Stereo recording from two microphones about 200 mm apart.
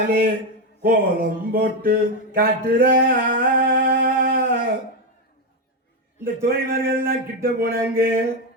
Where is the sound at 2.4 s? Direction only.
45° right (ahead or behind).